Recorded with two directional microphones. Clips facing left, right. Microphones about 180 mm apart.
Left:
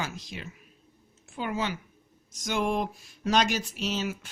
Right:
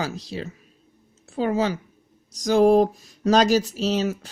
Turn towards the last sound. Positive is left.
turn(degrees=-40)  # may be behind; listen again after turning